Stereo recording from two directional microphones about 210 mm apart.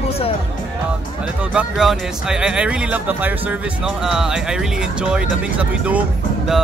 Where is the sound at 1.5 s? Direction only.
5° right (ahead or behind).